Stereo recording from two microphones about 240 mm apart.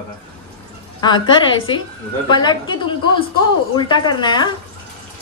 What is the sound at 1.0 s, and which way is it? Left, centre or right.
A woman's voice, centre.